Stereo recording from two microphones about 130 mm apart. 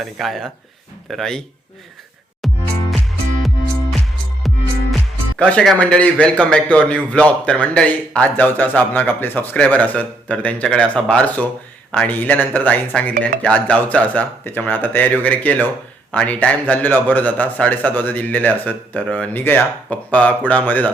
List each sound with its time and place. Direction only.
0.0 s speech: centre (ahead or behind)
2.4 s music: centre (ahead or behind)
4.4 s music: centre (ahead or behind)
5.5 s a man's voice: 10° left (ahead or behind)